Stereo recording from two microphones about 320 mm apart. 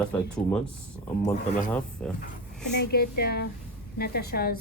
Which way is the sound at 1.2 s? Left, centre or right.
Left.